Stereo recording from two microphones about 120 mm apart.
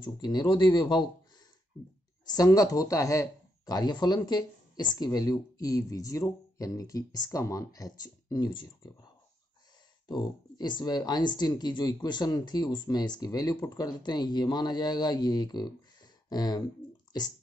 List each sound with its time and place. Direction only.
0.0 s speech: 35° left (ahead or behind)
2.2 s speech: 30° left (ahead or behind)
10.0 s speech: 40° left (ahead or behind)